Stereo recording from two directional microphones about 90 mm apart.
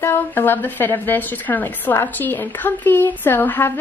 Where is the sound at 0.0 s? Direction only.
25° left (ahead or behind).